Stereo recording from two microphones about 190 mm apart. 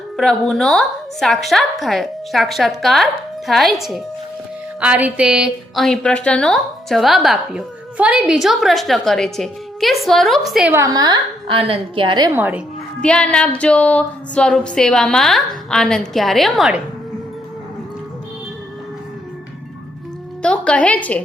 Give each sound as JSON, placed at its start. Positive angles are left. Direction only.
{"t": 0.2, "sound": "a woman's voice", "side_deg": 0}
{"t": 10.8, "sound": "a woman's voice", "side_deg": -20}
{"t": 12.3, "sound": "a woman's voice", "side_deg": -10}
{"t": 13.0, "sound": "a woman's voice", "side_deg": 5}
{"t": 20.4, "sound": "a woman's voice", "side_deg": 5}